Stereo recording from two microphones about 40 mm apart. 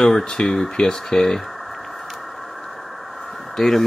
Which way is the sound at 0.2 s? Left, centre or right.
Centre.